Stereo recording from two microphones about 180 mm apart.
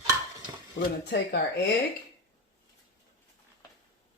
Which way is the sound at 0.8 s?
70° left (ahead or behind).